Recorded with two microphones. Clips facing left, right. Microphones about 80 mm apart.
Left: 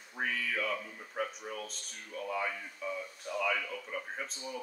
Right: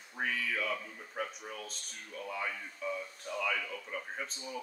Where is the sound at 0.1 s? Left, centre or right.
Centre.